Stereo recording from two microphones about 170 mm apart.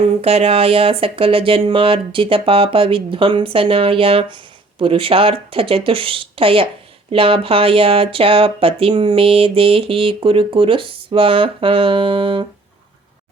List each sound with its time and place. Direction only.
0.2 s speech: 35° right (ahead or behind)